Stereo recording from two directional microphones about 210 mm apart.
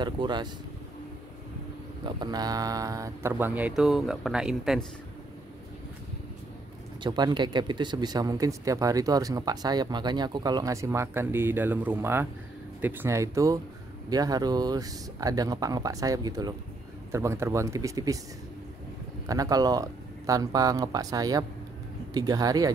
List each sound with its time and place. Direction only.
0.0 s speech: 20° right (ahead or behind)
2.0 s speech: 20° right (ahead or behind); by 4.8 s centre (ahead or behind)
7.0 s speech: 20° right (ahead or behind)
19.2 s speech: 15° right (ahead or behind)